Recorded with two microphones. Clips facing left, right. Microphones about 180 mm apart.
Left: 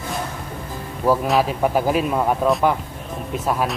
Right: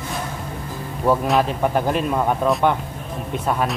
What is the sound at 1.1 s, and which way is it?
Speech, 5° left (ahead or behind).